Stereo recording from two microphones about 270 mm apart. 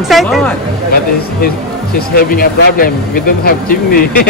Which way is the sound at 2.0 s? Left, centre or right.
Left.